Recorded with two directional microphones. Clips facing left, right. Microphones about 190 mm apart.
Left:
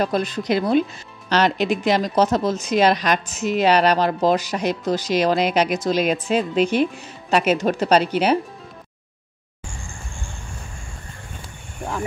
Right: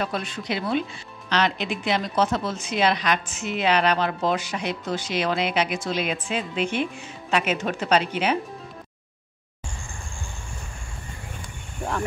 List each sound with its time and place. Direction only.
0.0 s speech: 40° left (ahead or behind)
11.8 s cricket: centre (ahead or behind)